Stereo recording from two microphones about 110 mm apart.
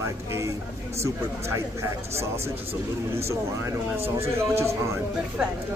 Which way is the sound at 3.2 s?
25° right (ahead or behind).